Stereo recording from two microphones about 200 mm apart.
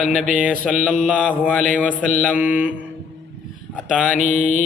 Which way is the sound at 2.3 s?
5° right (ahead or behind).